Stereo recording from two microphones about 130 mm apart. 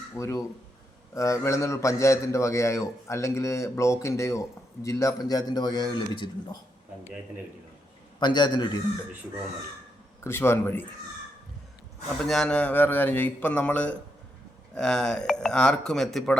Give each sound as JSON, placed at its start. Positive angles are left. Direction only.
{"t": 0.2, "sound": "a man's voice", "side_deg": 25}
{"t": 8.2, "sound": "a man's voice", "side_deg": 35}
{"t": 10.2, "sound": "speech", "side_deg": 20}
{"t": 12.2, "sound": "speech", "side_deg": 5}